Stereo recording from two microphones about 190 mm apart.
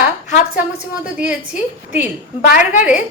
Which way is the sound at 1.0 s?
5° right (ahead or behind).